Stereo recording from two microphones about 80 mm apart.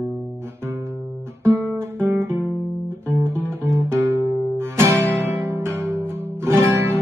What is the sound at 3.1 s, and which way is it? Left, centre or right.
Music, right.